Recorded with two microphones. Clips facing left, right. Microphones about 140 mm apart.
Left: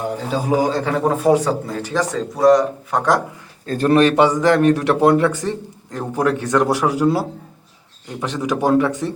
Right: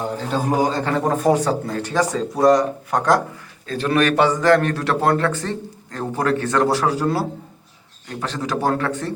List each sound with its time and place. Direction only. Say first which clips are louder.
0.3 s a man's voice: left 1 dB; 5° left (ahead or behind)
3.7 s a man's voice: left 5 dB; 45° left (ahead or behind)
3.9 s a man's voice: left 4 dB; 30° left (ahead or behind)
4.2 s speech: left 2 dB; 15° left (ahead or behind)